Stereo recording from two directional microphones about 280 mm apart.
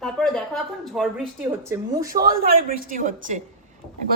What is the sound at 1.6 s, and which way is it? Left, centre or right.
Speech, centre.